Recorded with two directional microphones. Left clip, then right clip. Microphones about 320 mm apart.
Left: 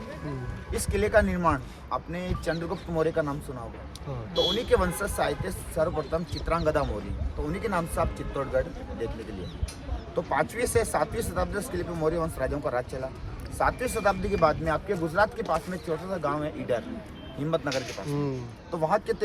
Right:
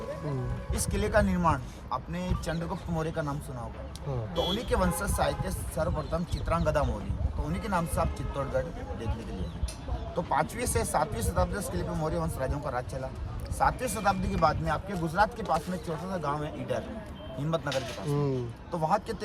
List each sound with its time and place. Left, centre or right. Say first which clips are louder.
0.8 s speech: left 4 dB; centre
4.4 s speech: left 5 dB; centre
10.2 s speech: left 2 dB; centre
18.1 s speech: right 1 dB; right
18.7 s speech: left 3 dB; centre